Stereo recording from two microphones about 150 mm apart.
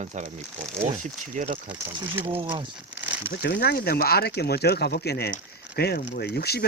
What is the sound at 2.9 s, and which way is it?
Crumpling, 10° right (ahead or behind).